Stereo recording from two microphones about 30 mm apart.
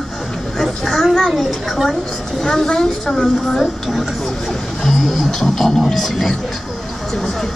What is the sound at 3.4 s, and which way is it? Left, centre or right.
Speech, centre.